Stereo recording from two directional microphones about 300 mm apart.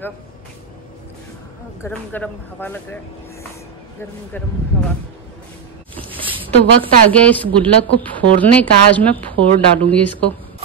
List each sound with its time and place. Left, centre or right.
1.8 s speech: centre
6.0 s a sound: centre
7.1 s speech: centre